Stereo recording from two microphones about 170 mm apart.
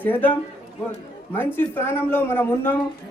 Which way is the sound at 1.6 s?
15° left (ahead or behind).